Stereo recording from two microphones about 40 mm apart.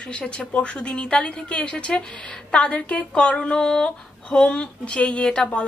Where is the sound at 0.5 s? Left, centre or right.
Left.